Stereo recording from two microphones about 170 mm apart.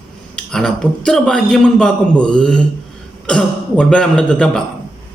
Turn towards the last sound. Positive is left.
turn(degrees=5)  # may be behind; listen again after turning